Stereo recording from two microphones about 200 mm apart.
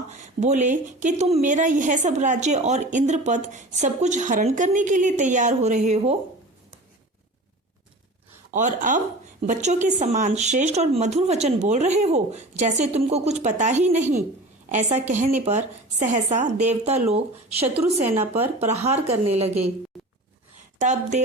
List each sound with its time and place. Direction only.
0.1 s speech: 35° right (ahead or behind)
8.5 s speech: 40° right (ahead or behind)
18.2 s speech: 10° right (ahead or behind)
18.7 s speech: 30° right (ahead or behind)
20.7 s speech: 35° right (ahead or behind)